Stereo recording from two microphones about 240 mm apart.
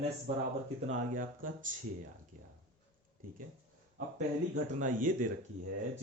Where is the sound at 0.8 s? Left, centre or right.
Right.